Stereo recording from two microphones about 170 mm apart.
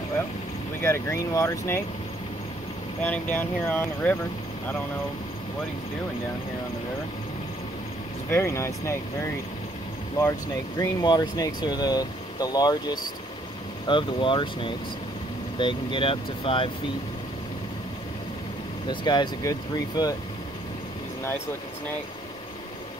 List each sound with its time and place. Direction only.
0.7 s speech: 15° left (ahead or behind)
3.0 s speech: 10° left (ahead or behind)
8.3 s speech: 15° left (ahead or behind)
10.8 s speech: 20° left (ahead or behind)
18.9 s speech: 25° left (ahead or behind)